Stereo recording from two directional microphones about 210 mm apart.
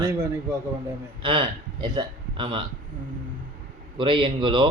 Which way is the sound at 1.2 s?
25° right (ahead or behind).